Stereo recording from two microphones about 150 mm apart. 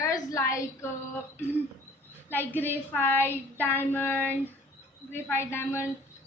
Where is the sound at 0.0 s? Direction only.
25° left (ahead or behind).